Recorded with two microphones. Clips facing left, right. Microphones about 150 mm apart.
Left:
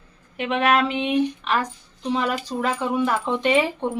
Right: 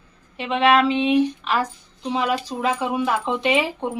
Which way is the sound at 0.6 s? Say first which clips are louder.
Right 4 dB; 25° right (ahead or behind).